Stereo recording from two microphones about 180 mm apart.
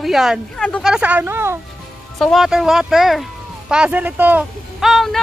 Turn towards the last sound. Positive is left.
turn(degrees=0)  # may be behind; listen again after turning